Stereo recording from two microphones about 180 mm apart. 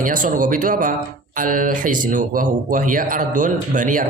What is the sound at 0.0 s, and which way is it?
Speech, 50° right (ahead or behind).